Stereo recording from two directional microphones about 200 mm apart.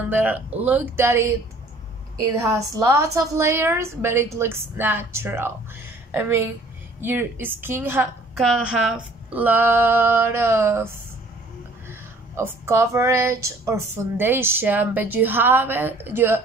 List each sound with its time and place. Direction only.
0.1 s speech: 10° right (ahead or behind)
11.9 s speech: 10° right (ahead or behind)